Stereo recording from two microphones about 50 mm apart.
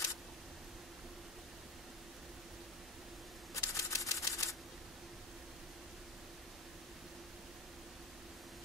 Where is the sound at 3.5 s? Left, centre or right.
Left.